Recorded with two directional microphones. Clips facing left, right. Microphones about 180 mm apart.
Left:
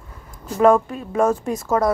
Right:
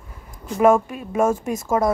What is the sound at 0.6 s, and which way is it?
Speech, 10° right (ahead or behind).